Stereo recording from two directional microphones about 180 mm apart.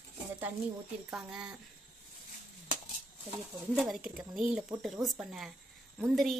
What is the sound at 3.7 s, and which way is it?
Speech, centre (ahead or behind).